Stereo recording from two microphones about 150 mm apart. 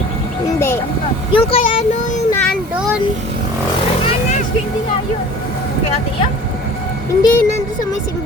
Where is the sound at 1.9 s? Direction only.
55° left (ahead or behind).